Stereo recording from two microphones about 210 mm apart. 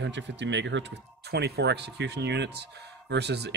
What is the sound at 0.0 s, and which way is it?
Speech, 55° right (ahead or behind).